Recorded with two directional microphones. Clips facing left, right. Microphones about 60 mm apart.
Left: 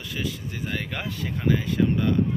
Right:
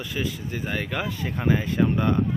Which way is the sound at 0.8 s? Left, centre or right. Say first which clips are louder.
Right 4 dB; centre.